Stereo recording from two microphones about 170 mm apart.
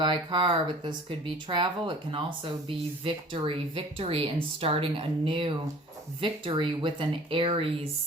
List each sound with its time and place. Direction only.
0.0 s speech: 25° right (ahead or behind)